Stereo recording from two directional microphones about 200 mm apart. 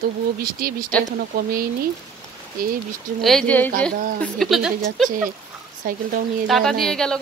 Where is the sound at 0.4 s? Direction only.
45° right (ahead or behind).